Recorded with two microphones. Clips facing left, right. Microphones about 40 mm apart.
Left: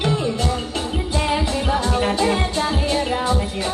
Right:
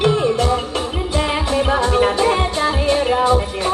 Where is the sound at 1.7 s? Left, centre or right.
Right.